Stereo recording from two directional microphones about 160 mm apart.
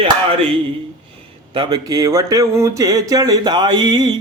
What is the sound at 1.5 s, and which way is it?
Speech, 25° right (ahead or behind).